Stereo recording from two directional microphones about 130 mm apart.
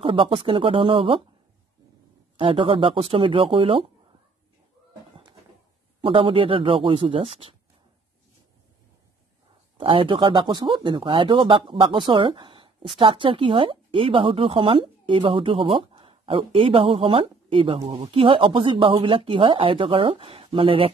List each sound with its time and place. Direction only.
0.0 s speech: 40° right (ahead or behind)
2.3 s speech: 40° right (ahead or behind)
5.9 s speech: 40° right (ahead or behind)
9.8 s speech: 45° right (ahead or behind)